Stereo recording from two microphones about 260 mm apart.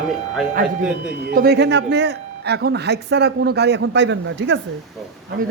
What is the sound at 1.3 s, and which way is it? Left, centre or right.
Speech, right.